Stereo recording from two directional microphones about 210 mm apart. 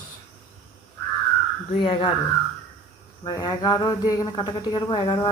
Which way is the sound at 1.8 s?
25° left (ahead or behind).